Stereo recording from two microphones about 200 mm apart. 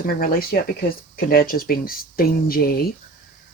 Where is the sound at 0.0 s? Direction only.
45° left (ahead or behind).